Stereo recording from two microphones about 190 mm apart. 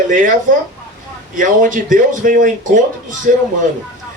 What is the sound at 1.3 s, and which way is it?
Speech, 45° right (ahead or behind).